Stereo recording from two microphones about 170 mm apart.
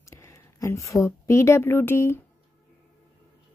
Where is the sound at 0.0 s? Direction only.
15° left (ahead or behind).